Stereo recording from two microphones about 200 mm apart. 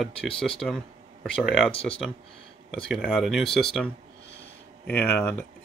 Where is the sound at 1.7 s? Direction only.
30° left (ahead or behind).